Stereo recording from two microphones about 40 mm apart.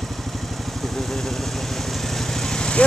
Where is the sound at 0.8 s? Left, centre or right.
Centre.